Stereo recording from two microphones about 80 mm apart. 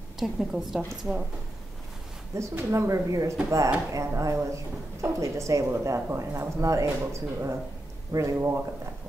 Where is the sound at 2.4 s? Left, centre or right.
Right.